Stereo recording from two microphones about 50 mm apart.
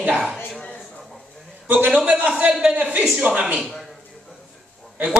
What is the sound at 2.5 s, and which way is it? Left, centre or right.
Speech, centre.